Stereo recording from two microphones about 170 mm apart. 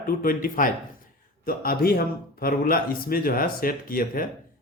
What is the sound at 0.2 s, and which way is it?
A man's voice, 55° left (ahead or behind).